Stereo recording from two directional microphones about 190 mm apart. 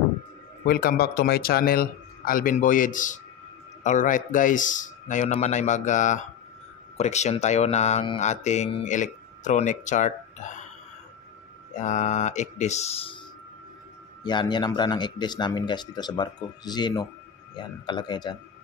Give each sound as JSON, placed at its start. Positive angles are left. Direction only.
{"t": 0.7, "sound": "a man's voice", "side_deg": 55}
{"t": 11.8, "sound": "speech", "side_deg": 40}
{"t": 14.2, "sound": "speech", "side_deg": 25}